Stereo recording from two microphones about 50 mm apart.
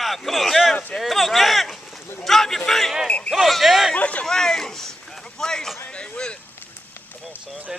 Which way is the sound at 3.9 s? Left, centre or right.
Left.